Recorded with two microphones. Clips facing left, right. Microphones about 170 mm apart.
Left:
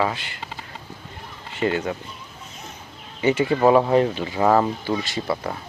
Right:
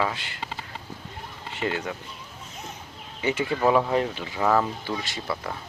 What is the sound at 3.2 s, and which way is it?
Speech, 35° left (ahead or behind).